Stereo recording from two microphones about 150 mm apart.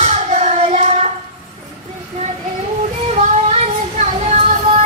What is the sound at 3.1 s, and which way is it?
Child singing, 50° right (ahead or behind).